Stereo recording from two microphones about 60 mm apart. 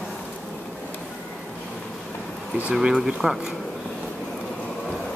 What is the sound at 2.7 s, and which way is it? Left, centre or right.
Speech, centre.